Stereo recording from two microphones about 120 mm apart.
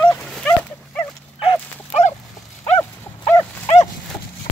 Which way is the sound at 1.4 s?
70° left (ahead or behind).